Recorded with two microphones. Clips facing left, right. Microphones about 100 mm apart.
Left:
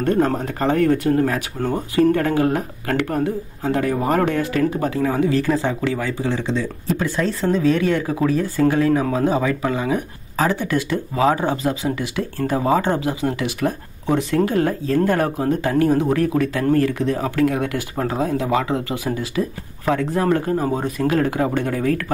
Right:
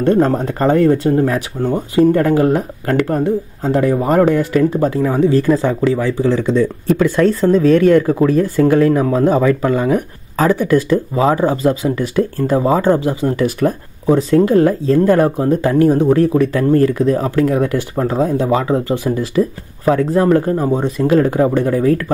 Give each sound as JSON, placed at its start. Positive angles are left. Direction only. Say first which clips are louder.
{"t": 0.0, "sound": "speech", "louder": "right 5 dB", "side_deg": -30}
{"t": 2.1, "sound": "speech", "louder": "right 6 dB", "side_deg": -35}
{"t": 5.0, "sound": "speech", "louder": "right 4 dB", "side_deg": -40}
{"t": 7.0, "sound": "speech", "louder": "right 10 dB", "side_deg": -55}
{"t": 7.3, "sound": "speech", "louder": "right 4 dB", "side_deg": -40}
{"t": 14.3, "sound": "speech", "louder": "right 8 dB", "side_deg": -35}
{"t": 20.6, "sound": "speech", "louder": "right 5 dB", "side_deg": -25}